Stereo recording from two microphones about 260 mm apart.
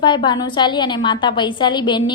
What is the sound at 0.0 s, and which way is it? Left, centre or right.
A woman's voice, centre.